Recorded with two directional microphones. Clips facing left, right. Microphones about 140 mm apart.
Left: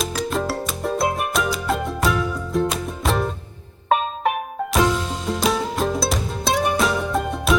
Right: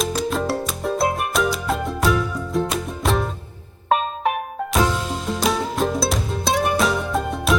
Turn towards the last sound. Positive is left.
turn(degrees=0)  # may be behind; listen again after turning